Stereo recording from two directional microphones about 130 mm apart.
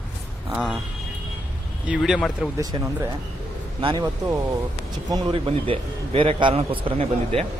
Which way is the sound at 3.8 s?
35° right (ahead or behind).